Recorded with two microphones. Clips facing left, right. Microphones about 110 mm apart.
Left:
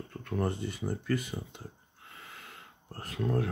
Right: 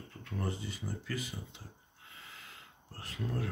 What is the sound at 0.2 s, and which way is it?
Speech, 55° left (ahead or behind).